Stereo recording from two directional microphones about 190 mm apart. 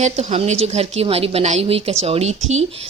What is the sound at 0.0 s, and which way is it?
A woman's voice, 35° right (ahead or behind).